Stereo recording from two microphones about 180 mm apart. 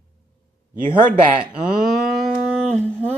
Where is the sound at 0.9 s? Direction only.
25° right (ahead or behind).